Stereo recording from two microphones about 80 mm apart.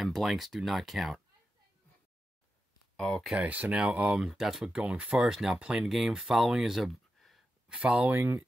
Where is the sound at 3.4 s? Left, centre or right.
Centre.